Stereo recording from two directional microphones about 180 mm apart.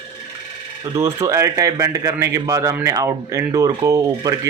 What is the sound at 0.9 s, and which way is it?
A man's voice, 15° right (ahead or behind).